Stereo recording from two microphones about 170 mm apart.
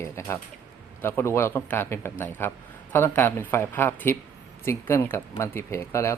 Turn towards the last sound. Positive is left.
turn(degrees=15)  # may be behind; listen again after turning